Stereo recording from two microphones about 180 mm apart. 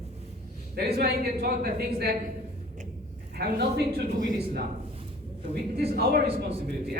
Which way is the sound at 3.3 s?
60° right (ahead or behind).